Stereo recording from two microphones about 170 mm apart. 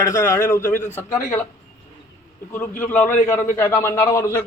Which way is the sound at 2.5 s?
10° left (ahead or behind).